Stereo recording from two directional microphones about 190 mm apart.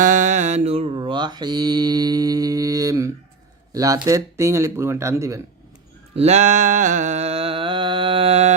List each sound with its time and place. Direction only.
0.0 s mantra: 40° right (ahead or behind); by 3.1 s 15° right (ahead or behind)
3.7 s speech: 20° right (ahead or behind)
6.1 s a sound: 35° right (ahead or behind)